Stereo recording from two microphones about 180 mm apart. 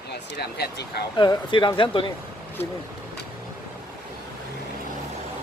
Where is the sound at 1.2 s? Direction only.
25° left (ahead or behind).